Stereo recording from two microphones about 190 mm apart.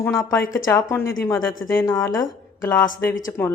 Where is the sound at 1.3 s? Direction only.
90° left.